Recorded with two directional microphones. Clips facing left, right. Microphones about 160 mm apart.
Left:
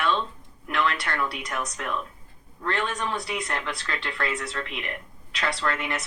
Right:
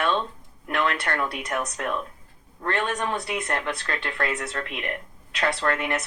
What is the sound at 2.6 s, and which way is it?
Speech, 50° right (ahead or behind).